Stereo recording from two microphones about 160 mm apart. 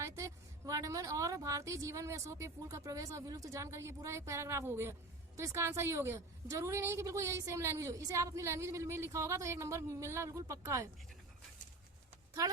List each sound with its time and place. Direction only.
0.0 s a woman's voice: 20° right (ahead or behind)